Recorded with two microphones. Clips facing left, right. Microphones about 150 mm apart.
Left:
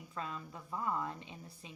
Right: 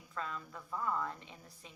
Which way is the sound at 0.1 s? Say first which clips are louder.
Right 1 dB; 20° left (ahead or behind).